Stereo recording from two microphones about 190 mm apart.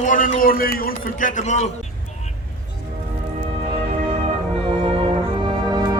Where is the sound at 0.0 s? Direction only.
45° left (ahead or behind).